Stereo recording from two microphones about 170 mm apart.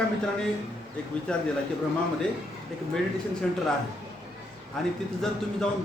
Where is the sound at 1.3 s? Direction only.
5° left (ahead or behind).